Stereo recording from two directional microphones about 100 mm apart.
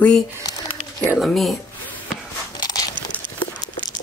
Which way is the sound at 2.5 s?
40° left (ahead or behind).